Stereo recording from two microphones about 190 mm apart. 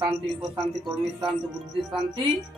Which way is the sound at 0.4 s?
Centre (ahead or behind).